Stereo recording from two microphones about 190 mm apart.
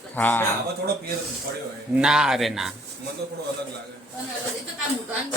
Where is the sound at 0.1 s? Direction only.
10° left (ahead or behind).